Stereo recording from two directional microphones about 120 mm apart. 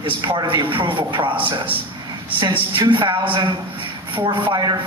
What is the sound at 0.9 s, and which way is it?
Speech, 45° right (ahead or behind).